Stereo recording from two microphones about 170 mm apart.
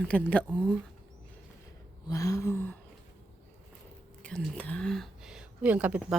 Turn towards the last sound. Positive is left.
turn(degrees=-10)  # may be behind; listen again after turning